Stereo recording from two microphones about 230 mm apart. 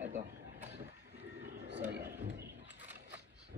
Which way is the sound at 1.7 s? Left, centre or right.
Right.